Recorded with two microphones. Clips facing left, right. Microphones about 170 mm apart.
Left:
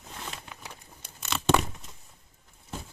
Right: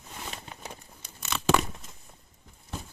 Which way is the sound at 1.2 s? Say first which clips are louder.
Even; centre (ahead or behind).